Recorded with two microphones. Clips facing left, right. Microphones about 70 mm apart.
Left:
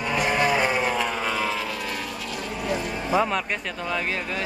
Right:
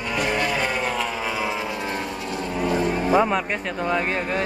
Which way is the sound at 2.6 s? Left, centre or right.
Right.